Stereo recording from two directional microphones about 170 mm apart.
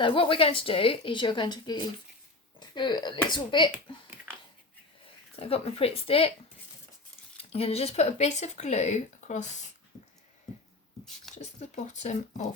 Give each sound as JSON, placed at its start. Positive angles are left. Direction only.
{"t": 0.0, "sound": "speech", "side_deg": 30}
{"t": 5.4, "sound": "speech", "side_deg": 35}
{"t": 7.5, "sound": "speech", "side_deg": 35}
{"t": 11.3, "sound": "speech", "side_deg": 45}